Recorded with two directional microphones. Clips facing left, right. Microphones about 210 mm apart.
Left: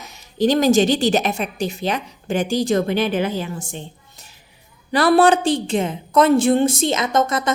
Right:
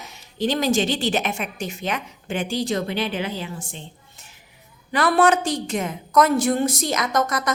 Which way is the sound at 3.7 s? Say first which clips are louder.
Left 6 dB; 40° left (ahead or behind).